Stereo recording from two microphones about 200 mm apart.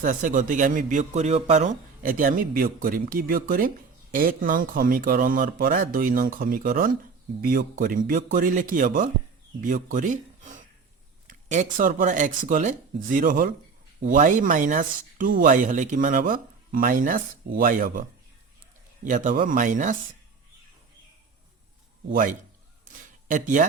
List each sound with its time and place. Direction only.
0.0 s speech: 40° right (ahead or behind)
19.0 s speech: 40° right (ahead or behind)
22.1 s speech: 40° right (ahead or behind)
22.9 s a sound: 40° right (ahead or behind)